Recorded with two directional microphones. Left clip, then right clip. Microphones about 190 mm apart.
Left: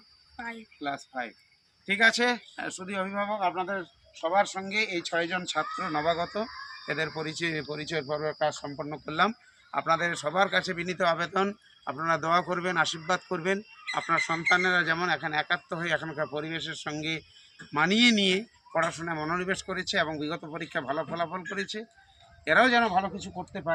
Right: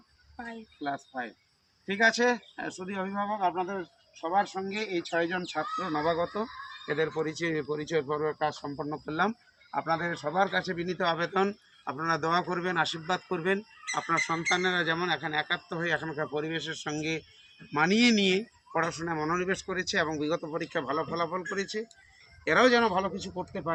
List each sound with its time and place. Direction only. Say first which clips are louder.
0.3 s speech: left 3 dB; 5° left (ahead or behind)
5.7 s speech: right 1 dB; 35° left (ahead or behind)
8.6 s speech: right 1 dB; 20° left (ahead or behind)